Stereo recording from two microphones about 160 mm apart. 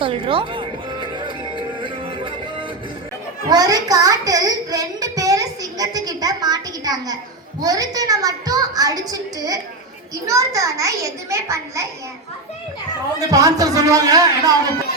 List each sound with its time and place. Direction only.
0.0 s music: 35° right (ahead or behind)
3.5 s child singing: 25° right (ahead or behind)
7.6 s a woman's voice: 25° right (ahead or behind)
13.1 s a woman's voice: 20° right (ahead or behind)